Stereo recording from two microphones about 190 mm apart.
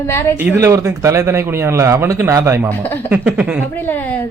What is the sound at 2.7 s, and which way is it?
Speech, 10° left (ahead or behind).